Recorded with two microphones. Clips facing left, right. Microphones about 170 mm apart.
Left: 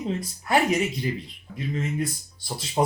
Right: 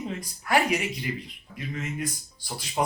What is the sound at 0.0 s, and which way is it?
Speech, 25° left (ahead or behind).